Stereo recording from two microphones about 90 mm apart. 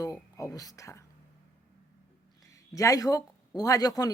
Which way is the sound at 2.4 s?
35° left (ahead or behind).